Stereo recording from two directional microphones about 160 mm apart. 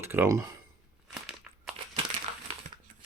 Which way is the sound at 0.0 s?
15° right (ahead or behind).